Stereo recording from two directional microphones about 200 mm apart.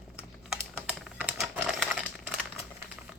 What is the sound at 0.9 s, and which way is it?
Computer keyboard, centre (ahead or behind).